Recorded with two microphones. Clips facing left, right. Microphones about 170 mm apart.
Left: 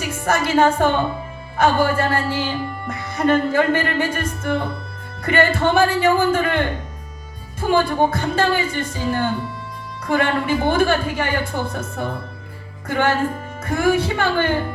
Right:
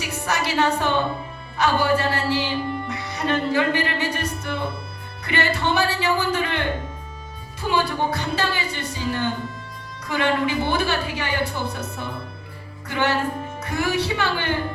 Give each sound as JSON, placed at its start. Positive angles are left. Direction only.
{"t": 0.0, "sound": "music", "side_deg": 50}